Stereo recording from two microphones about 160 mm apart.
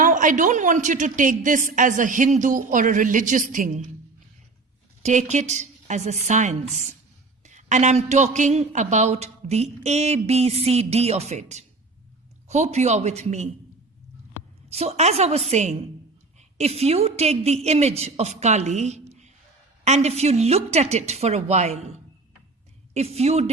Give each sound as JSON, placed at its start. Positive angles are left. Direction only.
{"t": 0.0, "sound": "a woman's voice", "side_deg": -55}
{"t": 5.0, "sound": "a woman's voice", "side_deg": -45}
{"t": 14.7, "sound": "a woman's voice", "side_deg": -40}
{"t": 23.0, "sound": "a woman's voice", "side_deg": -40}